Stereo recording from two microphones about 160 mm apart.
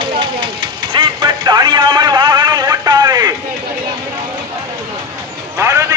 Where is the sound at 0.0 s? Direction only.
30° right (ahead or behind).